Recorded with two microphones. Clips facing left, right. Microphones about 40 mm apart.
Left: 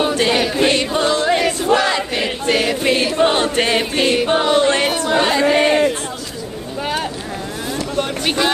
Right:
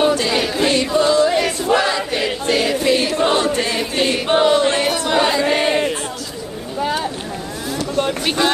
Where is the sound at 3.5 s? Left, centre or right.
Left.